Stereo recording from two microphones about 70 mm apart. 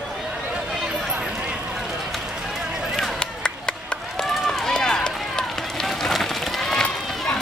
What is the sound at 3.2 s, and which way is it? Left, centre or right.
Chop, centre.